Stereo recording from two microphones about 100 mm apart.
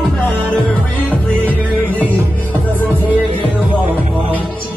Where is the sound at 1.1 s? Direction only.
15° left (ahead or behind).